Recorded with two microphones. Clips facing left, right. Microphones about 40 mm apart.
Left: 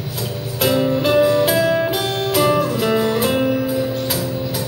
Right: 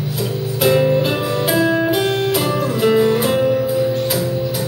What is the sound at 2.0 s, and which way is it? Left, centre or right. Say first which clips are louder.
Music: right 3 dB; right.